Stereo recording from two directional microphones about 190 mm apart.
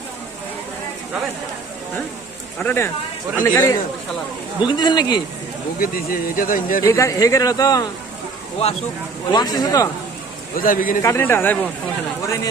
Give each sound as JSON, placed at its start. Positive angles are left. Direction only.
{"t": 2.6, "sound": "speech", "side_deg": 10}
{"t": 4.6, "sound": "speech", "side_deg": 25}
{"t": 5.8, "sound": "speech", "side_deg": 50}
{"t": 6.8, "sound": "speech", "side_deg": 15}
{"t": 9.3, "sound": "speech", "side_deg": 20}
{"t": 10.5, "sound": "speech", "side_deg": 45}
{"t": 11.0, "sound": "speech", "side_deg": 15}